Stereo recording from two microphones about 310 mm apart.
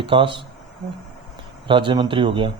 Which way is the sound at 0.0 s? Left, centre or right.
Centre.